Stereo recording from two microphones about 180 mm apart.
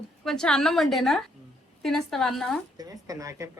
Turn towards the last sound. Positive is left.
turn(degrees=-15)  # may be behind; listen again after turning